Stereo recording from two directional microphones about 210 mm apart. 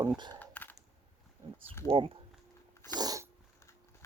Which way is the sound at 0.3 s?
10° left (ahead or behind).